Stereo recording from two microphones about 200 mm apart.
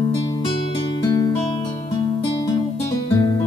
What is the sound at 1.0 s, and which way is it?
Music, 20° left (ahead or behind).